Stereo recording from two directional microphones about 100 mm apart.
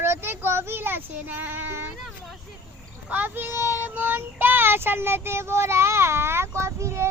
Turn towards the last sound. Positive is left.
turn(degrees=-30)  # may be behind; listen again after turning